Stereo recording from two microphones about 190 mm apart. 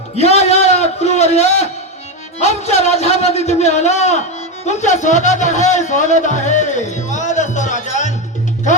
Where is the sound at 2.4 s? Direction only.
35° left (ahead or behind).